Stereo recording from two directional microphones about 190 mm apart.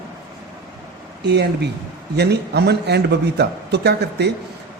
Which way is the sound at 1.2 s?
60° right (ahead or behind).